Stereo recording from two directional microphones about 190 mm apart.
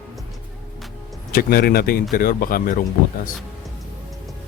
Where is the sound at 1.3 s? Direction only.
50° left (ahead or behind).